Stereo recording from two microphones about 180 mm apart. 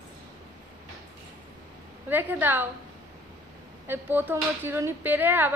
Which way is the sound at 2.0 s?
10° right (ahead or behind).